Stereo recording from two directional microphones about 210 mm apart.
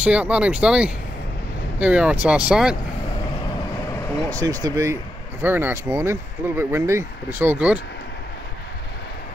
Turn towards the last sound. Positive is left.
turn(degrees=-5)  # may be behind; listen again after turning